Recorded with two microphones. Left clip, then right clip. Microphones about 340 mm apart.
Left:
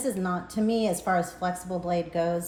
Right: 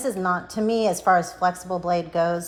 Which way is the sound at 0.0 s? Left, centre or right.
Centre.